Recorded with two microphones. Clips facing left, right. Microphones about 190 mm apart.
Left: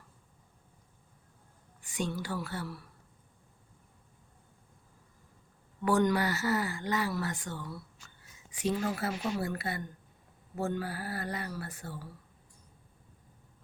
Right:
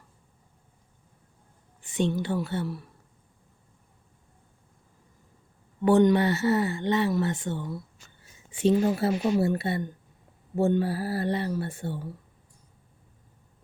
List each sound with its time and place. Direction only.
1.8 s speech: 25° right (ahead or behind)
5.8 s speech: 20° right (ahead or behind)